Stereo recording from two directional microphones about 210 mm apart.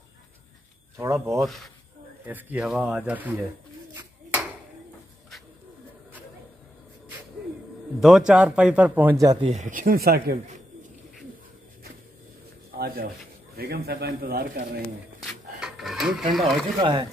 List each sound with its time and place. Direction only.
0.9 s speech: 15° right (ahead or behind)
1.4 s speech: centre (ahead or behind)
3.9 s a sound: 10° right (ahead or behind)
8.0 s speech: 5° right (ahead or behind)
9.5 s speech: 35° right (ahead or behind)
12.7 s speech: 45° right (ahead or behind)
15.1 s a sound: centre (ahead or behind)
16.3 s speech: centre (ahead or behind)
16.8 s speech: 20° right (ahead or behind)